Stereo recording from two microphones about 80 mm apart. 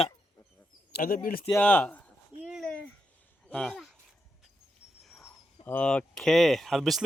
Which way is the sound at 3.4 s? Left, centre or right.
Centre.